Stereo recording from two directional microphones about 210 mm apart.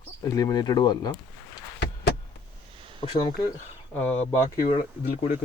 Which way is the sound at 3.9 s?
10° left (ahead or behind).